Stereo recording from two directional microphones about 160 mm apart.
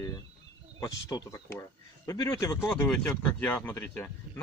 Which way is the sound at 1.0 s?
20° left (ahead or behind).